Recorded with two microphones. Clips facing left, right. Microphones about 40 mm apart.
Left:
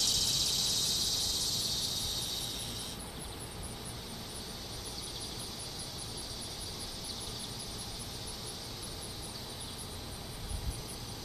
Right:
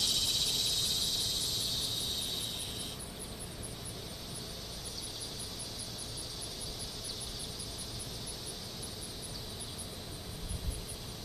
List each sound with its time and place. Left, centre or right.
0.0 s vehicle: centre